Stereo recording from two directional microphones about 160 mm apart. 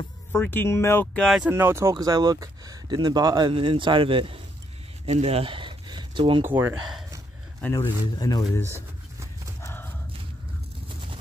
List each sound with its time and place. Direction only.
0.3 s speech: 15° left (ahead or behind)
1.5 s speech: 15° right (ahead or behind); by 4.4 s 35° right (ahead or behind)
5.0 s a sound: 40° right (ahead or behind)
6.4 s speech: 15° right (ahead or behind)
7.8 s speech: 25° left (ahead or behind)
8.6 s pigeon: 15° right (ahead or behind)
9.6 s horse: 15° left (ahead or behind)